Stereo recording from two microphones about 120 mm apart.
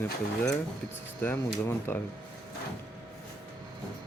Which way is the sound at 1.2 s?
20° left (ahead or behind).